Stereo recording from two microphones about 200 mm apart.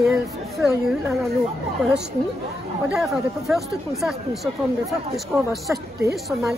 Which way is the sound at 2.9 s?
Centre (ahead or behind).